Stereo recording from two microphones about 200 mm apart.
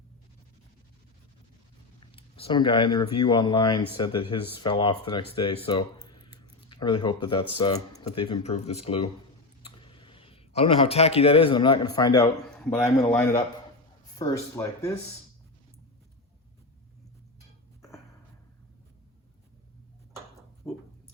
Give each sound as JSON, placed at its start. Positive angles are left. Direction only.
{"t": 2.0, "sound": "speech", "side_deg": 30}
{"t": 6.1, "sound": "a sound", "side_deg": 25}
{"t": 6.7, "sound": "speech", "side_deg": 25}
{"t": 14.2, "sound": "speech", "side_deg": 15}